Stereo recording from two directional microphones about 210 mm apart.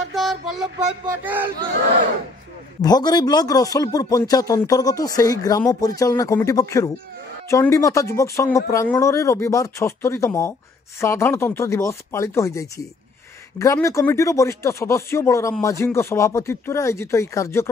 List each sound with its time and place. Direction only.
0.1 s music: centre (ahead or behind)
1.2 s speech: 10° right (ahead or behind)
2.8 s speech: 20° left (ahead or behind)